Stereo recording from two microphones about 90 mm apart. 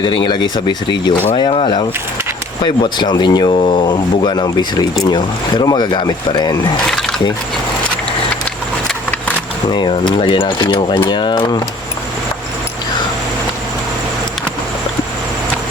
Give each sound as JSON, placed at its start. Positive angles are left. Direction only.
{"t": 0.0, "sound": "speech", "side_deg": 65}
{"t": 1.5, "sound": "speech", "side_deg": 85}
{"t": 2.6, "sound": "speech", "side_deg": 55}
{"t": 3.5, "sound": "speech", "side_deg": 75}
{"t": 9.7, "sound": "speech", "side_deg": 60}